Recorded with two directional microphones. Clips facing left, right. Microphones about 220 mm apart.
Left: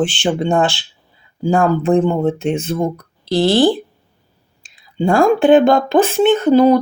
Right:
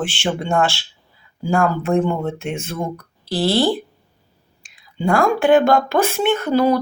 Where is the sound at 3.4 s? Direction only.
20° left (ahead or behind).